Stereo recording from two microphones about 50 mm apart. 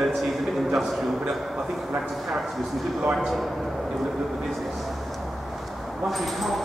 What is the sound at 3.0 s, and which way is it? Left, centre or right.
Speech, right.